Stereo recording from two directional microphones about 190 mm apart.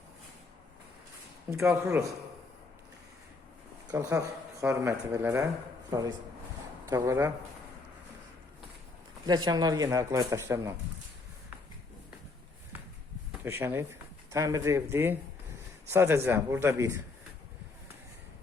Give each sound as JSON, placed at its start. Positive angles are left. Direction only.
{"t": 1.5, "sound": "speech", "side_deg": -15}
{"t": 3.8, "sound": "speech", "side_deg": -20}
{"t": 6.9, "sound": "speech", "side_deg": -15}
{"t": 9.2, "sound": "speech", "side_deg": -20}
{"t": 13.4, "sound": "speech", "side_deg": -10}